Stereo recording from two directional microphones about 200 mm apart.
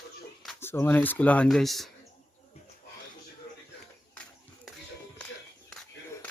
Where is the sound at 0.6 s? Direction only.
10° left (ahead or behind).